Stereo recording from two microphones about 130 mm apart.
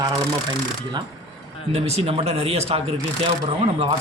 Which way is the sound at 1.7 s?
55° right (ahead or behind).